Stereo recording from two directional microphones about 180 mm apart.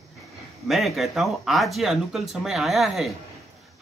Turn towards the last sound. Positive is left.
turn(degrees=0)  # may be behind; listen again after turning